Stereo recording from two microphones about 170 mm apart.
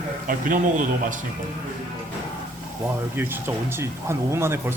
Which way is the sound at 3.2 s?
15° right (ahead or behind).